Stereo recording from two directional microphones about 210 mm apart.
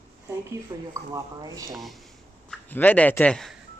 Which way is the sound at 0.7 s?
20° right (ahead or behind).